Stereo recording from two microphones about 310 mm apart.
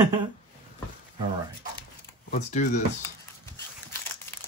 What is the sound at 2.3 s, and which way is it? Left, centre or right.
Speech, left.